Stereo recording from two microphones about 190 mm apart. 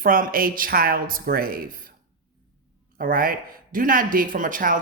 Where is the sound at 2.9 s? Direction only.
50° right (ahead or behind).